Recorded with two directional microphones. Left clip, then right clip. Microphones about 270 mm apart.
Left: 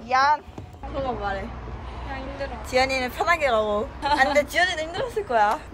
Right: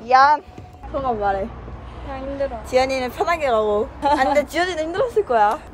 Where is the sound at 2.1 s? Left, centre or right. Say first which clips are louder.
Right 8 dB; centre.